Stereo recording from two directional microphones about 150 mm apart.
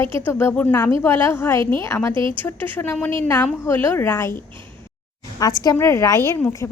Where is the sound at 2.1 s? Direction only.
35° right (ahead or behind).